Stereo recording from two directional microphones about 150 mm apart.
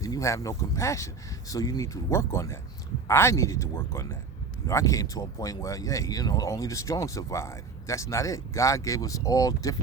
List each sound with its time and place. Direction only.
0.0 s speech: 20° left (ahead or behind)